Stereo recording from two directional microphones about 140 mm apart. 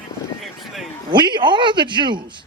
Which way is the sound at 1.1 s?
35° right (ahead or behind).